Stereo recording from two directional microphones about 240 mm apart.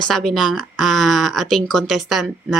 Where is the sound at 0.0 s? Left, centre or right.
Centre.